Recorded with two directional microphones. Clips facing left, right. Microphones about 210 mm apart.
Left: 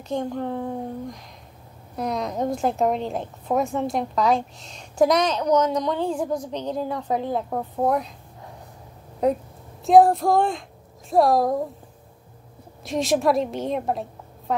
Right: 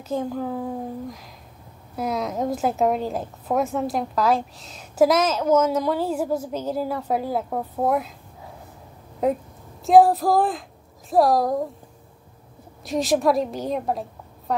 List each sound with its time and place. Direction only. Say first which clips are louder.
0.1 s a woman's voice: even; 5° right (ahead or behind)
9.2 s a woman's voice: left 1 dB; centre (ahead or behind)
12.8 s a woman's voice: right 1 dB; centre (ahead or behind)
14.5 s a sound: even; centre (ahead or behind)